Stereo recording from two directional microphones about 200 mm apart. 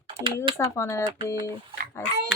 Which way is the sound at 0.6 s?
15° left (ahead or behind).